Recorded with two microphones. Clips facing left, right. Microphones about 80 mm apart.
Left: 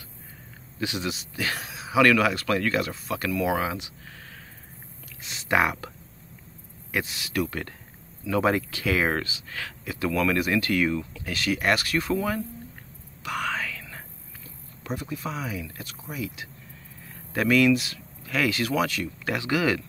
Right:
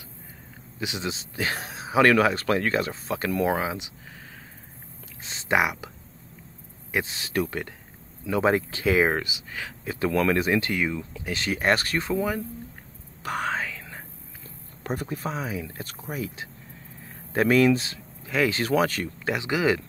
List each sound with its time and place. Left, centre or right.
0.7 s a man's voice: right
3.5 s speech: right
5.2 s speech: right
5.6 s speech: centre
6.9 s speech: right
9.8 s speech: right
12.1 s speech: right
13.2 s whispering: right
14.8 s a man's voice: right
19.2 s speech: right